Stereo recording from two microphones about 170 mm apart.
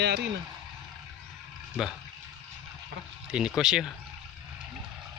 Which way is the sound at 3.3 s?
5° right (ahead or behind).